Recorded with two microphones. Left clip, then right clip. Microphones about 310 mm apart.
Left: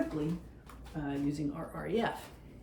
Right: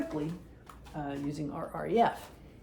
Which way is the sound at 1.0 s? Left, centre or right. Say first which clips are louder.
Left 2 dB; centre.